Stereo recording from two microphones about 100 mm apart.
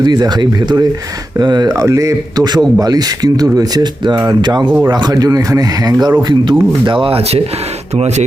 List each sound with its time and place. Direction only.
0.0 s a man's voice: 45° right (ahead or behind)
6.2 s speech: 50° right (ahead or behind); by 7.4 s 65° right (ahead or behind)